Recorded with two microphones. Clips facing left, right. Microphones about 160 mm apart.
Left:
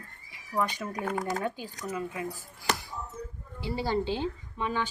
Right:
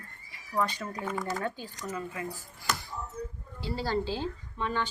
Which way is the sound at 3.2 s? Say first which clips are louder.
Right 2 dB; 20° left (ahead or behind).